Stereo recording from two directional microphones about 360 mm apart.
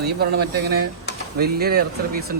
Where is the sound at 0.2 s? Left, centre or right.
Right.